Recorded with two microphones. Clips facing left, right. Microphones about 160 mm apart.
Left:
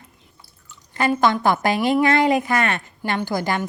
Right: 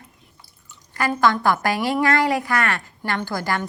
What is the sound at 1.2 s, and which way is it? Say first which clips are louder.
A woman's voice: right 1 dB; 20° left (ahead or behind).